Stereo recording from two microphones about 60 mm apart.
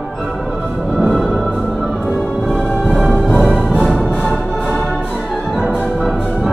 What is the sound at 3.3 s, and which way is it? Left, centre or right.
Music, centre.